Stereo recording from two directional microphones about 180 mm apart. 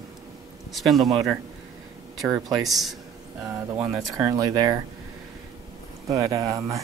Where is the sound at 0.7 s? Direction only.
Centre (ahead or behind).